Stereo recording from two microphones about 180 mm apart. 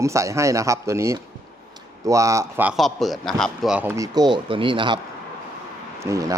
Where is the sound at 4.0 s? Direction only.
25° right (ahead or behind).